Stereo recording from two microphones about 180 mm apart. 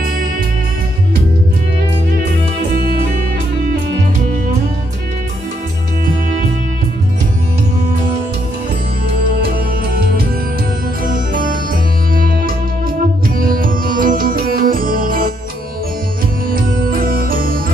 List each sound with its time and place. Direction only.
2.7 s music: 55° right (ahead or behind)
11.1 s music: 50° right (ahead or behind)
16.4 s music: 50° right (ahead or behind)